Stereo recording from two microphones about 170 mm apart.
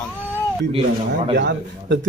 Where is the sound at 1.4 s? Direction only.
90° right.